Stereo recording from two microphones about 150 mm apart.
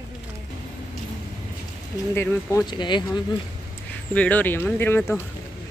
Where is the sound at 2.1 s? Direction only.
15° left (ahead or behind).